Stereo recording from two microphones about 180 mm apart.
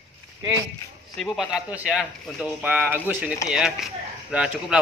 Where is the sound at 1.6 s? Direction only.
5° right (ahead or behind).